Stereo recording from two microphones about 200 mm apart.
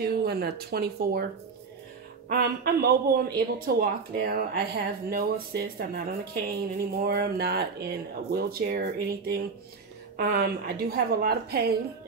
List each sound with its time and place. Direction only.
0.0 s speech: 50° right (ahead or behind)
2.2 s speech: 50° right (ahead or behind)